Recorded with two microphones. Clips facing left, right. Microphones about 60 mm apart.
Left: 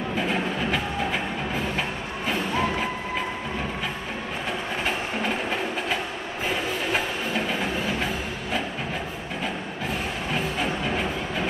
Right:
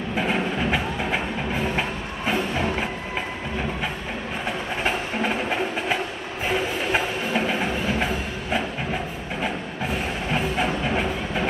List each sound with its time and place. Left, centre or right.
0.3 s music: centre
6.9 s a sound: centre
10.3 s train: centre